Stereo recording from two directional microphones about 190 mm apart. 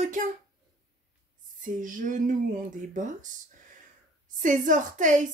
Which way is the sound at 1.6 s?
45° right (ahead or behind).